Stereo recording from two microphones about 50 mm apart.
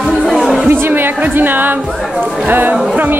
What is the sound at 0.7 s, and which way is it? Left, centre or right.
A woman's voice, right.